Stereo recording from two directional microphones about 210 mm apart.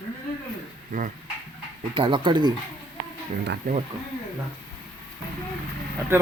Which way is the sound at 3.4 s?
55° right (ahead or behind).